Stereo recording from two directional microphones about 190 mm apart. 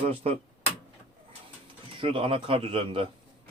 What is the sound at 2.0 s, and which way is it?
Speech, 25° right (ahead or behind).